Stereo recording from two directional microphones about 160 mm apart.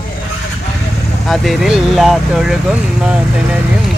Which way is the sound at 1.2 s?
Centre (ahead or behind).